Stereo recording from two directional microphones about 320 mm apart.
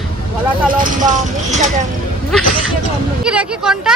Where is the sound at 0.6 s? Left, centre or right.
Right.